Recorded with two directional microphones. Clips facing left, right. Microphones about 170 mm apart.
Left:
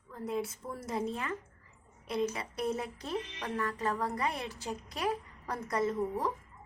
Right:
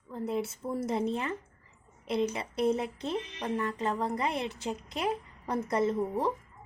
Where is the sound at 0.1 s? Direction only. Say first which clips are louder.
Right 3 dB; 30° right (ahead or behind).